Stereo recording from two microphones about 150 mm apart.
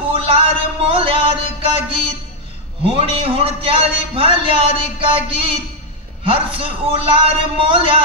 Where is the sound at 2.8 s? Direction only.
40° right (ahead or behind).